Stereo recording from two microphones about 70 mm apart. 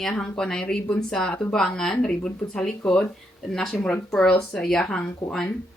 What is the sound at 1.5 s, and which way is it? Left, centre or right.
Speech, centre.